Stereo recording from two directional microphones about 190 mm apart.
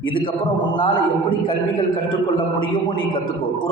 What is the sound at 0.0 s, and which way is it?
A man's voice, 25° left (ahead or behind).